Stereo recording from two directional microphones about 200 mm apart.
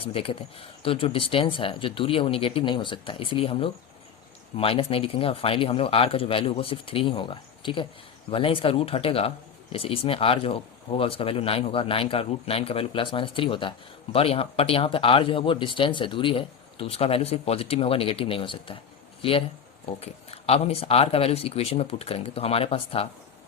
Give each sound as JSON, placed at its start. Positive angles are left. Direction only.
{"t": 0.0, "sound": "speech", "side_deg": 30}